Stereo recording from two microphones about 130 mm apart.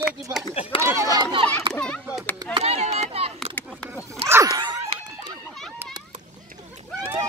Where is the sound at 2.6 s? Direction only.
55° right (ahead or behind).